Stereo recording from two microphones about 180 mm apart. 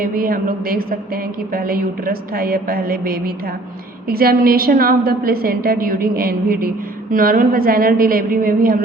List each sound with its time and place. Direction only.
0.0 s a woman's voice: 50° right (ahead or behind)